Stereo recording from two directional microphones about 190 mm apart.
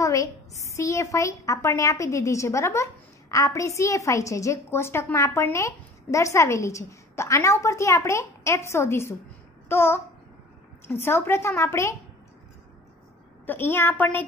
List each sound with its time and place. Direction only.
0.0 s a sound: 15° left (ahead or behind)
0.7 s a woman's voice: 15° left (ahead or behind)
13.5 s a woman's voice: 10° left (ahead or behind)